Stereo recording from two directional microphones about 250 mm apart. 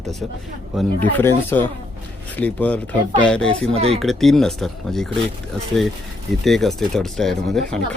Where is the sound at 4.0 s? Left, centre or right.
Centre.